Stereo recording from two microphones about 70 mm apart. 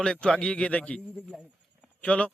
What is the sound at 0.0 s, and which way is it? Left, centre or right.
A man's voice, centre.